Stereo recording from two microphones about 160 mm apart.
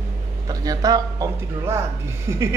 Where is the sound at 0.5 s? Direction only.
25° right (ahead or behind).